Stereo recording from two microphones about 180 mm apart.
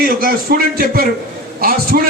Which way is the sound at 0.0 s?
55° right (ahead or behind).